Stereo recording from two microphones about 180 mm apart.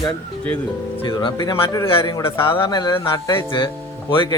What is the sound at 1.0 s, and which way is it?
Speech, 20° left (ahead or behind).